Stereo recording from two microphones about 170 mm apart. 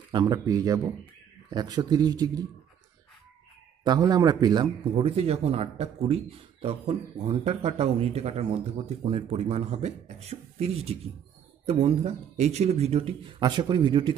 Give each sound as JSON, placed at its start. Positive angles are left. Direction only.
{"t": 0.1, "sound": "speech", "side_deg": -25}
{"t": 3.8, "sound": "a man's voice", "side_deg": -25}